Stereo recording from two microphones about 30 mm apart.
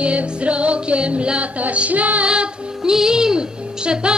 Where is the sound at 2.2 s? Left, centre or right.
Right.